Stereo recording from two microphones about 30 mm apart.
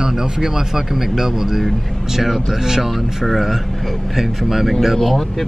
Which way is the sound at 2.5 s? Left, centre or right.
Centre.